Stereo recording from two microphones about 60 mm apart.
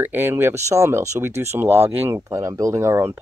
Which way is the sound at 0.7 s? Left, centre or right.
Right.